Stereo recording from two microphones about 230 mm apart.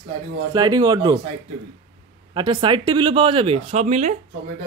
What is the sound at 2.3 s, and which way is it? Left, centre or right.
Speech, centre.